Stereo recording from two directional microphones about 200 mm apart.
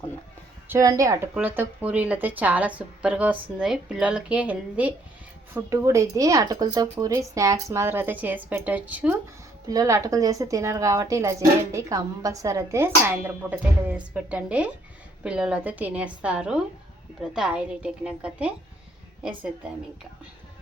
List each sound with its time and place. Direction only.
0.7 s a woman's voice: 15° right (ahead or behind)